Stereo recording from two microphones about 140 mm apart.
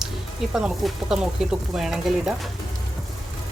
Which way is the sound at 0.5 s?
5° right (ahead or behind).